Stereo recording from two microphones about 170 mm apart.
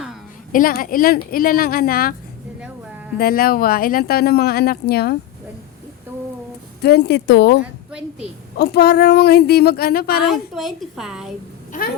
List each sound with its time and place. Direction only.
0.5 s speech: 55° left (ahead or behind)
3.2 s speech: 60° left (ahead or behind)
6.8 s speech: 70° left (ahead or behind); by 7.6 s 90° left
7.9 s a woman's voice: 5° right (ahead or behind)
8.5 s speech: 70° left (ahead or behind)
10.2 s a woman's voice: centre (ahead or behind)